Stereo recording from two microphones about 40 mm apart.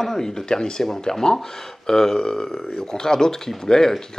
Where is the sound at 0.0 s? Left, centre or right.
Centre.